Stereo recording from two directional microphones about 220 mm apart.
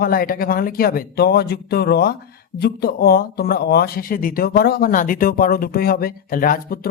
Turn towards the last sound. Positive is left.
turn(degrees=40)  # may be behind; listen again after turning